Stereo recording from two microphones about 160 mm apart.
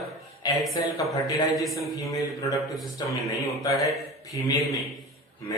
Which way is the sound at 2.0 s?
20° left (ahead or behind).